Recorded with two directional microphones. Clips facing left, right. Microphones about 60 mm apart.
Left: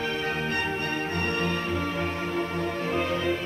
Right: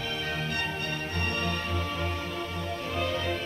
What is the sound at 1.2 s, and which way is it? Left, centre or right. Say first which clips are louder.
Music: left 2 dB; left.